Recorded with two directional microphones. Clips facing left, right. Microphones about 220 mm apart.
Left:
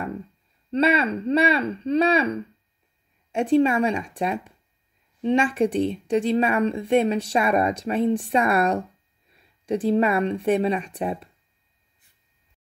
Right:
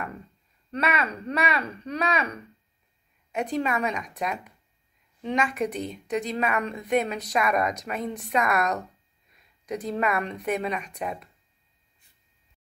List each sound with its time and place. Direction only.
0.7 s speech: 30° left (ahead or behind)